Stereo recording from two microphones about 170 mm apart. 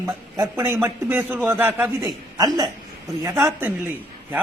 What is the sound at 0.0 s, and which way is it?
A man's voice, 15° right (ahead or behind).